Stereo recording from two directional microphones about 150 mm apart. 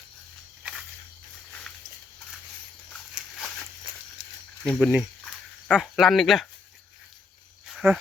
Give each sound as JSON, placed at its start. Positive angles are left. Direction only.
{"t": 2.9, "sound": "a sound", "side_deg": 5}
{"t": 4.8, "sound": "speech", "side_deg": -10}
{"t": 7.8, "sound": "speech", "side_deg": -15}